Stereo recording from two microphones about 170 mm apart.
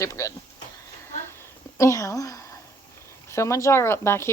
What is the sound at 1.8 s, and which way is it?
A woman's voice, 20° left (ahead or behind).